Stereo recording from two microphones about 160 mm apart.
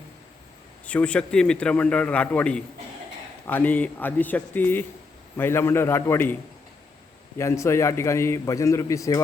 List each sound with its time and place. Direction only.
0.9 s a man's voice: 5° left (ahead or behind)
7.3 s a man's voice: 15° left (ahead or behind)